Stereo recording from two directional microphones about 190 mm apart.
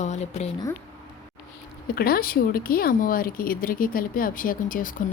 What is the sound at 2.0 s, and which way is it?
Speech, 50° left (ahead or behind).